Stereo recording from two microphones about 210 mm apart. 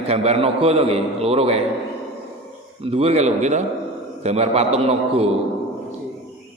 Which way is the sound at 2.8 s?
25° right (ahead or behind).